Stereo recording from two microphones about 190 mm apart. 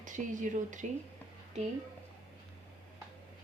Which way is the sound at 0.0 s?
40° right (ahead or behind).